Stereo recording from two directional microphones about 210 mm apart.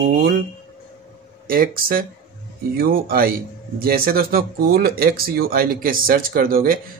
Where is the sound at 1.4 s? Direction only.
45° right (ahead or behind).